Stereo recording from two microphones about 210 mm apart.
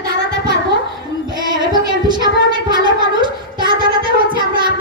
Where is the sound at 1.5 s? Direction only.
20° right (ahead or behind).